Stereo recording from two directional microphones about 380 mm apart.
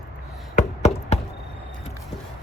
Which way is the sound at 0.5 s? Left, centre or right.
Centre.